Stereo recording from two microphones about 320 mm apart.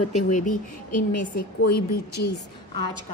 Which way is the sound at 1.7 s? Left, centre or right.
Left.